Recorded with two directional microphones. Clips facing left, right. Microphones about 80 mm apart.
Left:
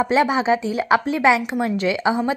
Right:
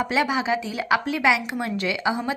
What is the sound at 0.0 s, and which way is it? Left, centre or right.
A woman's voice, left.